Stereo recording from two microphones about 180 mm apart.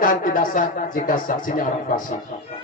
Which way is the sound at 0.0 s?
50° left (ahead or behind).